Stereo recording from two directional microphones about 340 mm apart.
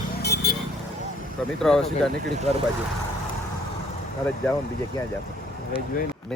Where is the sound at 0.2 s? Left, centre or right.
Left.